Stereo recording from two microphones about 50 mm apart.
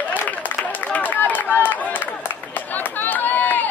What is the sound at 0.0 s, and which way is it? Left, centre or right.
Run, left.